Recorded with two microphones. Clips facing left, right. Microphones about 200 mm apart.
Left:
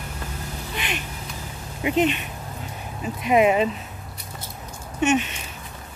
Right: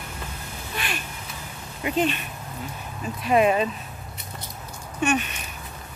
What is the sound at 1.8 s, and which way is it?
Speech, 20° left (ahead or behind).